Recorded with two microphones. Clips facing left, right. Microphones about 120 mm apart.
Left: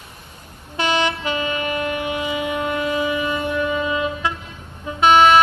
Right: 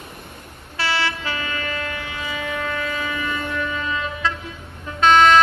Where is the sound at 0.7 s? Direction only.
20° left (ahead or behind).